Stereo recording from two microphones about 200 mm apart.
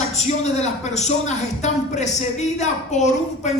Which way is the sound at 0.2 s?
35° left (ahead or behind).